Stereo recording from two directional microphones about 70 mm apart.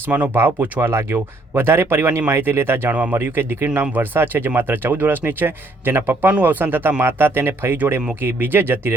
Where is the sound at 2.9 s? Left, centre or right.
Right.